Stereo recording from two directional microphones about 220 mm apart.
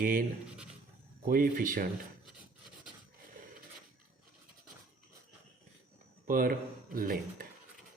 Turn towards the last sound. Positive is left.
turn(degrees=-40)  # may be behind; listen again after turning